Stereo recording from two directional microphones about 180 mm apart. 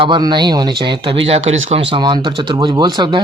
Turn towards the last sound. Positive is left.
turn(degrees=-25)  # may be behind; listen again after turning